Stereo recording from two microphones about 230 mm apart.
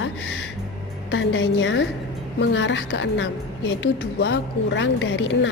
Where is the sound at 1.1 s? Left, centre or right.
Left.